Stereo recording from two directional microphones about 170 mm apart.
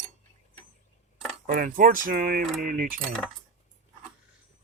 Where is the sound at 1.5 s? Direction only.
55° right (ahead or behind).